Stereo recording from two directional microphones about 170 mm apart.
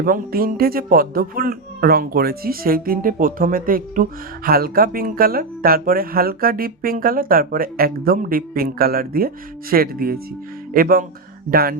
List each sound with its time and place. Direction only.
0.0 s speech: 60° right (ahead or behind)